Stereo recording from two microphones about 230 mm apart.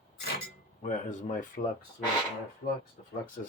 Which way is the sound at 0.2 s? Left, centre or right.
Left.